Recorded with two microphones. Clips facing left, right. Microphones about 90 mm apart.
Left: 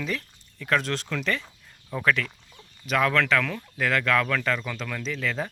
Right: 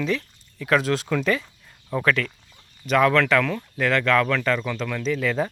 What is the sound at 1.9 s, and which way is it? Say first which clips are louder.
Speech: right 3 dB; centre (ahead or behind).